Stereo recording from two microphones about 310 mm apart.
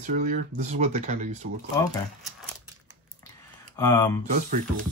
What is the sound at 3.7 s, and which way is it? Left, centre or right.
Speech, centre.